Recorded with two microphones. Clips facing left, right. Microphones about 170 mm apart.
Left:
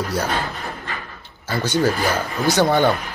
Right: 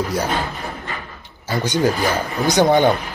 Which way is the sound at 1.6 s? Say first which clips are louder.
Right 1 dB; 15° right (ahead or behind).